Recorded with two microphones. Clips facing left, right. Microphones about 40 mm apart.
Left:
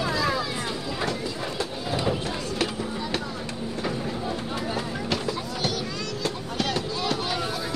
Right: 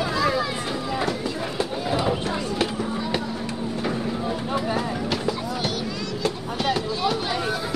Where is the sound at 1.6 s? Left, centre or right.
Right.